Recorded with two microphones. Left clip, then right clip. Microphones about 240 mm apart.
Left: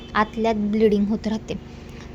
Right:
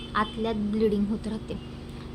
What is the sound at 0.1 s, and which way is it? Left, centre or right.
A woman's voice, left.